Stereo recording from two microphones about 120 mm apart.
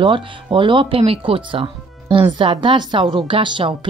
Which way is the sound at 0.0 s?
45° right (ahead or behind).